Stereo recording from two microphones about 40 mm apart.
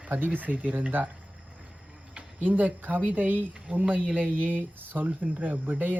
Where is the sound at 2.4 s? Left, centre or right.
Right.